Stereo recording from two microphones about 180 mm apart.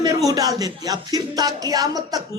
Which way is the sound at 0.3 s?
20° right (ahead or behind).